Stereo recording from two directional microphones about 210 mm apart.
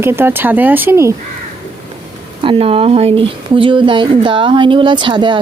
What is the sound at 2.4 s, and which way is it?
Speech, 25° right (ahead or behind).